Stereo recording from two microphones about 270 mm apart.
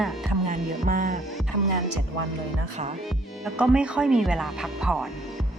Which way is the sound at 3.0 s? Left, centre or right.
Centre.